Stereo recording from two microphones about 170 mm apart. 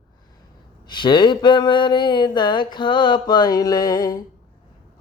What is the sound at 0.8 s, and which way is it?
Mantra, 30° left (ahead or behind).